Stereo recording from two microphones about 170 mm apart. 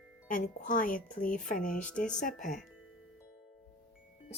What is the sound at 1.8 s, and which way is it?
Speech, 5° left (ahead or behind).